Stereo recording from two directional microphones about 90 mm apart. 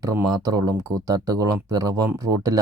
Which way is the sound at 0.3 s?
45° right (ahead or behind).